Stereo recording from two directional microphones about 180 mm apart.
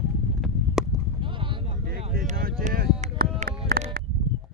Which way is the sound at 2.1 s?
55° right (ahead or behind).